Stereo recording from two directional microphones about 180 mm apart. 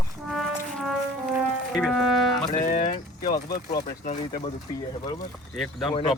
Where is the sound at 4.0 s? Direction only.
45° left (ahead or behind).